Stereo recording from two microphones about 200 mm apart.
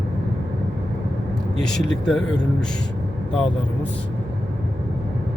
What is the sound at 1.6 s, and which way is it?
Speech, 5° left (ahead or behind).